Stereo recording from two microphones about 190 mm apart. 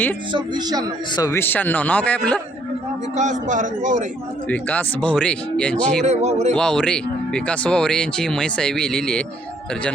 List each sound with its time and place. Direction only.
0.3 s speech: 20° right (ahead or behind)
1.1 s speech: 15° left (ahead or behind)
3.2 s speech: 40° right (ahead or behind)
4.4 s speech: 5° left (ahead or behind)
6.1 s speech: 35° right (ahead or behind)
6.5 s speech: 5° left (ahead or behind)